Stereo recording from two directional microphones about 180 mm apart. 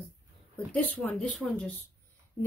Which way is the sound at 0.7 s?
10° left (ahead or behind).